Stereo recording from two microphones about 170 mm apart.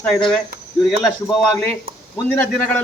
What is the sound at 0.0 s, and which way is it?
A man's voice, 5° left (ahead or behind).